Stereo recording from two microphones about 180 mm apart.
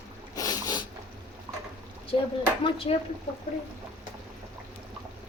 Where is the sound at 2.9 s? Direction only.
30° left (ahead or behind).